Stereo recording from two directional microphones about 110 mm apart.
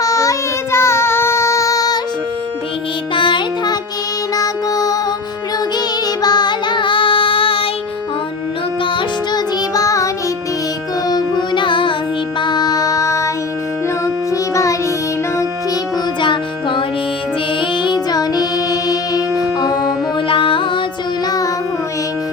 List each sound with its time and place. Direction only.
0.0 s child singing: 30° left (ahead or behind)
3.2 s music: 45° left (ahead or behind)
6.2 s child singing: 40° left (ahead or behind); by 7.7 s 55° left (ahead or behind)
8.8 s music: 50° left (ahead or behind)
9.7 s music: 30° left (ahead or behind)
11.1 s music: 45° left (ahead or behind); by 13.3 s 30° left (ahead or behind)
14.5 s music: 30° left (ahead or behind)
16.2 s music: 50° left (ahead or behind)
20.2 s music: 50° left (ahead or behind)
21.2 s child singing: 35° left (ahead or behind)